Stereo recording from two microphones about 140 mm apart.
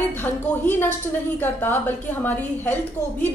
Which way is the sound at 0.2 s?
15° left (ahead or behind).